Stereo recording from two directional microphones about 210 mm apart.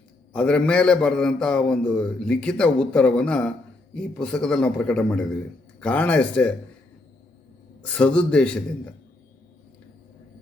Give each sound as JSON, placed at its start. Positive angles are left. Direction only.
{"t": 0.3, "sound": "a man's voice", "side_deg": 5}
{"t": 7.8, "sound": "a man's voice", "side_deg": 5}